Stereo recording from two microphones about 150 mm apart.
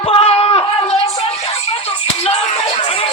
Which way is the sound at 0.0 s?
35° left (ahead or behind).